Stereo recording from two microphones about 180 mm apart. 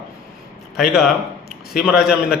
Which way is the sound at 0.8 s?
Centre (ahead or behind).